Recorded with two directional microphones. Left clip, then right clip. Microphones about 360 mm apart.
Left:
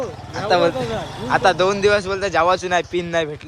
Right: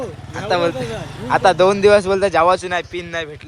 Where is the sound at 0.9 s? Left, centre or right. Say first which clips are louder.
Left 2 dB; left.